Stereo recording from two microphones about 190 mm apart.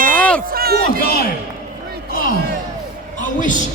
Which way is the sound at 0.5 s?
55° right (ahead or behind).